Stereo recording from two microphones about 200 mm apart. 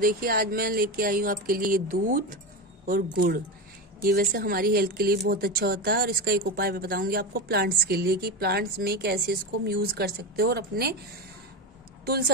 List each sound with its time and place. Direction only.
0.0 s speech: 45° right (ahead or behind)